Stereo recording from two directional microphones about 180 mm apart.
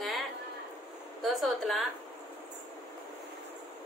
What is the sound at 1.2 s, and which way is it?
Speech, centre (ahead or behind).